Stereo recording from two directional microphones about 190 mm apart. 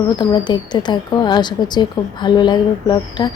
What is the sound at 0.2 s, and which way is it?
Speech, 25° left (ahead or behind).